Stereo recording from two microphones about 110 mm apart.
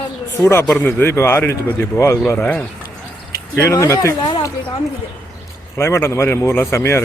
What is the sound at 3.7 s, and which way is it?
Speech, 30° left (ahead or behind).